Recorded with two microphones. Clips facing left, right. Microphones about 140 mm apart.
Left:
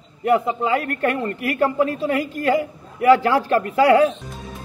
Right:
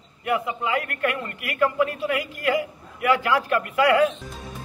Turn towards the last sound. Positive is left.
turn(degrees=35)  # may be behind; listen again after turning